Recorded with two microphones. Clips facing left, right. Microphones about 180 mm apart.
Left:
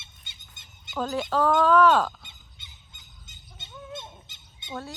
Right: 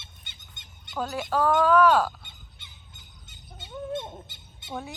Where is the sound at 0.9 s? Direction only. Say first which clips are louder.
Left 1 dB; 10° right (ahead or behind).